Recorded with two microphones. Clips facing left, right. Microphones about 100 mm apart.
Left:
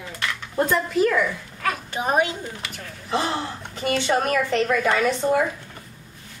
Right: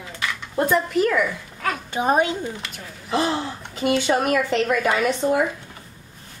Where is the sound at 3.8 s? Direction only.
10° right (ahead or behind).